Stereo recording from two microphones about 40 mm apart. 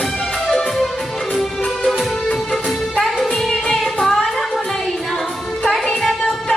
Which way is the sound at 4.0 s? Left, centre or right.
Centre.